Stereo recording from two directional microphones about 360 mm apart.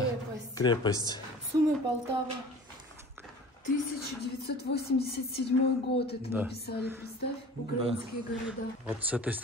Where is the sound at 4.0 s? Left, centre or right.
Left.